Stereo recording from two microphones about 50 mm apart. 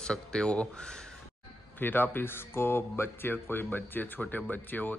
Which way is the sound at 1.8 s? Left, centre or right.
Left.